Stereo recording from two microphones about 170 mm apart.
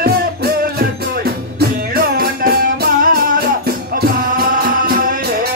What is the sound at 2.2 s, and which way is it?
Music, 60° right (ahead or behind).